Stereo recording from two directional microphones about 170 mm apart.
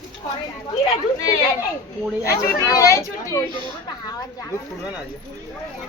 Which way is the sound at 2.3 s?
20° left (ahead or behind).